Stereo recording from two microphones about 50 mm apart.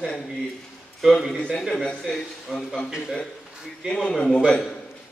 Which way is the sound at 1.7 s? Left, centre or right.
Centre.